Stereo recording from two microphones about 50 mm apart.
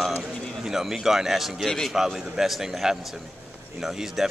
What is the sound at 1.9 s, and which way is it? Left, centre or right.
Speech, centre.